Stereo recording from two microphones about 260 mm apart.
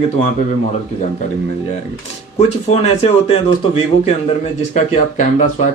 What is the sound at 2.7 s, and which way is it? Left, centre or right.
Speech, left.